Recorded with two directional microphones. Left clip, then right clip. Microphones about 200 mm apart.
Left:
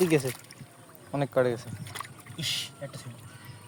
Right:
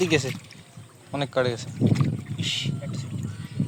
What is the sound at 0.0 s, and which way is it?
Speech, 5° left (ahead or behind).